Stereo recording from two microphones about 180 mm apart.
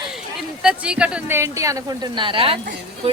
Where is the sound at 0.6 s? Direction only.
5° right (ahead or behind).